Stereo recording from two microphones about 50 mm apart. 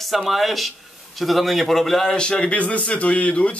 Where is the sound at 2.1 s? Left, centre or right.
Centre.